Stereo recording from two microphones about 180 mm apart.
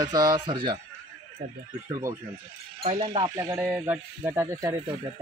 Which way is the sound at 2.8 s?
30° right (ahead or behind).